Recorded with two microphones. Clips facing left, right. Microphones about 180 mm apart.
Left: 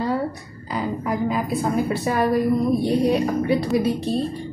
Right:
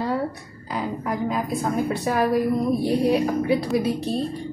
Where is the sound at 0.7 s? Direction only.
Centre (ahead or behind).